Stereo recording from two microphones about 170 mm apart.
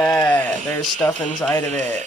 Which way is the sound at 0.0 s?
10° left (ahead or behind).